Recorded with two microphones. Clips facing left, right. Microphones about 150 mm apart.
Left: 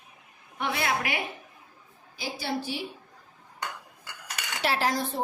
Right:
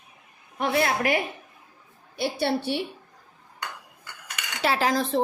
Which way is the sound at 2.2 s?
65° right (ahead or behind).